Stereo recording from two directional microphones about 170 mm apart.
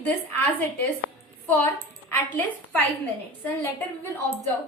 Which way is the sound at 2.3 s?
10° left (ahead or behind).